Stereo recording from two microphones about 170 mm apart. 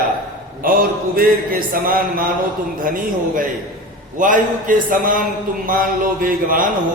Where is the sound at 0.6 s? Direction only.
55° right (ahead or behind).